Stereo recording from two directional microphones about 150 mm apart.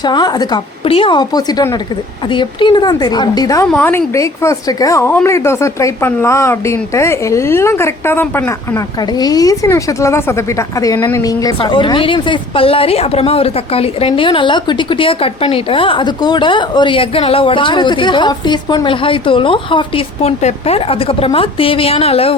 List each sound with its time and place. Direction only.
0.0 s a woman's voice: 30° left (ahead or behind)
3.7 s a woman's voice: 10° left (ahead or behind); by 22.4 s 40° left (ahead or behind)